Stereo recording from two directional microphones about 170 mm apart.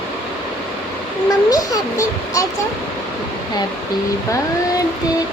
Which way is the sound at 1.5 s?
20° left (ahead or behind).